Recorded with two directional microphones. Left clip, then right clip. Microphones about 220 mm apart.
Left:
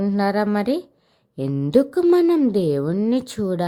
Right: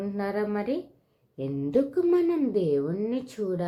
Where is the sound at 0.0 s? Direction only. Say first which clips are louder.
Left 9 dB; 45° left (ahead or behind).